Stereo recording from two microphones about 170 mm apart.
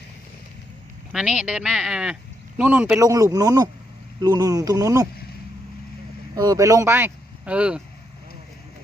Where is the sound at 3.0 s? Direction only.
20° right (ahead or behind).